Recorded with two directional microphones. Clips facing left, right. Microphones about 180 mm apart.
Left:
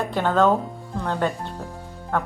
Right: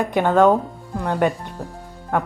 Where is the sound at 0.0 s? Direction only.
15° right (ahead or behind).